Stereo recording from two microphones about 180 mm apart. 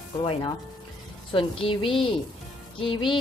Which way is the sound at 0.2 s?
25° left (ahead or behind).